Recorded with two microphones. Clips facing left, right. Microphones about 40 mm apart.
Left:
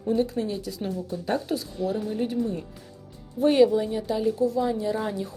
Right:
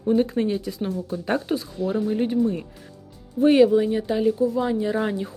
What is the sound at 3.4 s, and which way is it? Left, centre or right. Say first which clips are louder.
Speech: right 3 dB; centre.